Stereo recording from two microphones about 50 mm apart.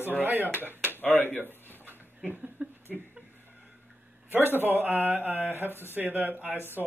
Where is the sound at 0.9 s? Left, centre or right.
Left.